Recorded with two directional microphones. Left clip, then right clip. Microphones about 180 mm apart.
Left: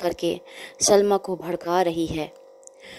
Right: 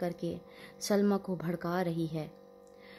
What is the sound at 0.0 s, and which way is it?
Speech, 40° left (ahead or behind).